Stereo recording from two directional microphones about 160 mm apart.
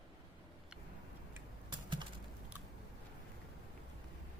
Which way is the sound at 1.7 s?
30° right (ahead or behind).